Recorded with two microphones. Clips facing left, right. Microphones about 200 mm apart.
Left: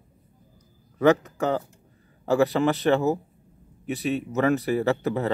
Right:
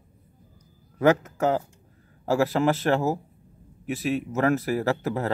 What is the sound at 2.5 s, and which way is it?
Speech, centre (ahead or behind).